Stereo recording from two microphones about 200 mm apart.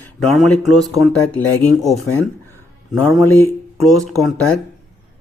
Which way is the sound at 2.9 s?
Centre (ahead or behind).